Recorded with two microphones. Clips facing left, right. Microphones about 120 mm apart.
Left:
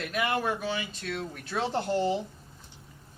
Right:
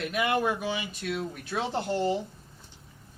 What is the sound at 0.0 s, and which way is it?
Speech, 15° right (ahead or behind).